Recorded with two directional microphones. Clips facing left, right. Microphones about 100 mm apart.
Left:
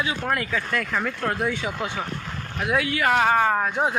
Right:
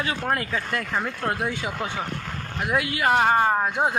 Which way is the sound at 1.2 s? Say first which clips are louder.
Left 1 dB; 10° right (ahead or behind).